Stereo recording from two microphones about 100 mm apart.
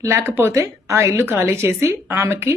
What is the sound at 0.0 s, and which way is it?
A woman's voice, 25° right (ahead or behind).